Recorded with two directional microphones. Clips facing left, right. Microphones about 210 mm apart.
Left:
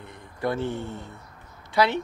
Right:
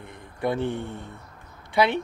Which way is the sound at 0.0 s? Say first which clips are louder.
Right 1 dB; 20° right (ahead or behind).